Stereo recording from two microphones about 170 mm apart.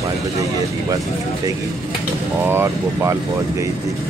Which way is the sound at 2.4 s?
15° right (ahead or behind).